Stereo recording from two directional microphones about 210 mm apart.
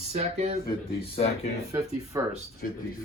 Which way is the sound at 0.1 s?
30° right (ahead or behind).